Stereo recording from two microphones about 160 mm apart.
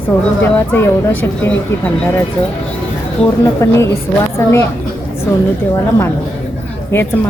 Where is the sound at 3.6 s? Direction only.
20° left (ahead or behind).